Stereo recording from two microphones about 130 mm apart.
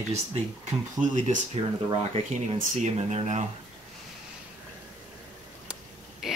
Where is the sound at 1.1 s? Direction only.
75° right (ahead or behind).